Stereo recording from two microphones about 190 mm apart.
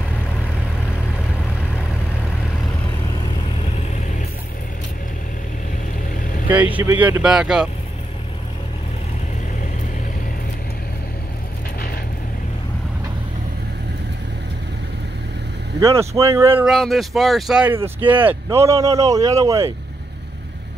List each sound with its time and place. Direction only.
6.5 s speech: 10° right (ahead or behind)
15.8 s speech: 15° right (ahead or behind)
16.6 s speech: centre (ahead or behind); by 19.7 s 15° right (ahead or behind)